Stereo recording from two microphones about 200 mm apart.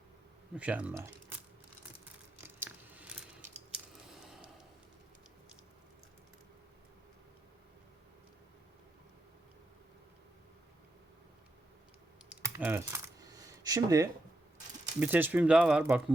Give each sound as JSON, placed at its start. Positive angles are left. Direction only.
{"t": 0.5, "sound": "speech", "side_deg": -5}
{"t": 2.4, "sound": "a sound", "side_deg": -10}
{"t": 12.4, "sound": "coin", "side_deg": -10}
{"t": 15.0, "sound": "speech", "side_deg": -10}